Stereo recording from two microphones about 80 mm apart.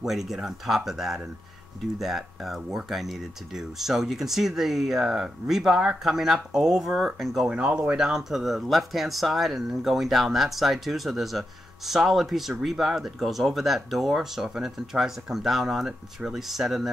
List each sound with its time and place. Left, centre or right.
0.0 s speech: centre
7.4 s speech: centre